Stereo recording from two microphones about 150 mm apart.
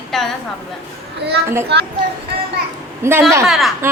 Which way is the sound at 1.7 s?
90° right.